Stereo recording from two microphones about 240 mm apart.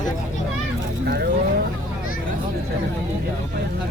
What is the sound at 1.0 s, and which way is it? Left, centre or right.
Speech, right.